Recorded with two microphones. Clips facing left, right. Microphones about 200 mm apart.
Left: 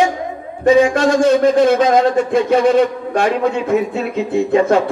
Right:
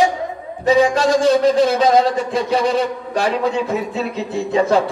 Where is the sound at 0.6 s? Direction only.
55° left (ahead or behind).